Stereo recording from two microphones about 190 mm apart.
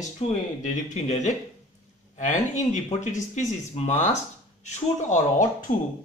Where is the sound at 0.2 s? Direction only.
30° left (ahead or behind).